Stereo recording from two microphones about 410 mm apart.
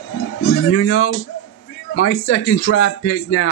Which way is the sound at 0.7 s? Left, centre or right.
Left.